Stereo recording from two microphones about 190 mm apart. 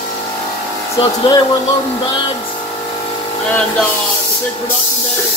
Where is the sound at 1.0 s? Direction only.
25° left (ahead or behind).